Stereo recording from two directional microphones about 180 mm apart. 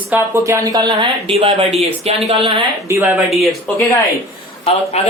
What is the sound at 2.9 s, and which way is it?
Speech, 15° right (ahead or behind).